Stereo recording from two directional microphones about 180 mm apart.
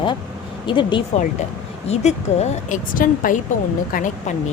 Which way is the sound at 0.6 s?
25° left (ahead or behind).